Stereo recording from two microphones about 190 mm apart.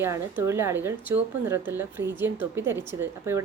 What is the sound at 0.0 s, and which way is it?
Speech, 15° right (ahead or behind).